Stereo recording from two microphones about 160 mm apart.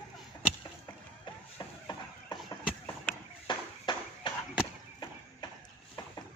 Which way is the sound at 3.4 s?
30° left (ahead or behind).